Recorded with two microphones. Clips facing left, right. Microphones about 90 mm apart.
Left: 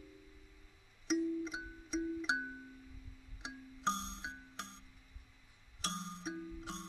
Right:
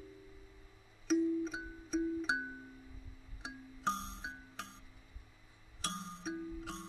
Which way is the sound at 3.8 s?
Centre (ahead or behind).